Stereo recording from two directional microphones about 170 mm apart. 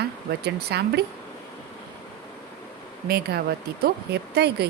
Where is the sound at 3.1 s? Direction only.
65° right (ahead or behind).